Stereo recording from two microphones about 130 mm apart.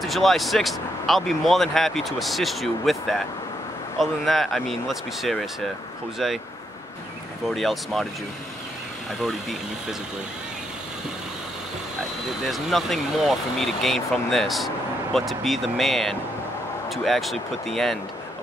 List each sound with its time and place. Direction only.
0.0 s speech: centre (ahead or behind)
7.4 s speech: centre (ahead or behind)
9.2 s speech: centre (ahead or behind)
12.4 s speech: centre (ahead or behind)